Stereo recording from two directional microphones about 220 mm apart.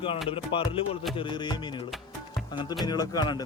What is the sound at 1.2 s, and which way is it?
Music, 20° left (ahead or behind).